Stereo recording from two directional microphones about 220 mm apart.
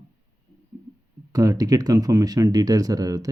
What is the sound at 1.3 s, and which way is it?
Speech, 15° right (ahead or behind).